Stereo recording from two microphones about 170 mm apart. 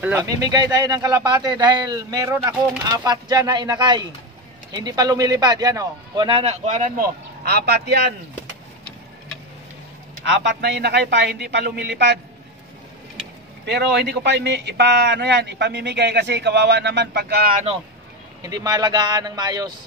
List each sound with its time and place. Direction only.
0.0 s speech: 15° right (ahead or behind); by 8.0 s 75° right (ahead or behind)
10.2 s speech: 90° right
13.7 s speech: 85° right; by 17.6 s 65° right (ahead or behind)
18.4 s speech: 20° right (ahead or behind)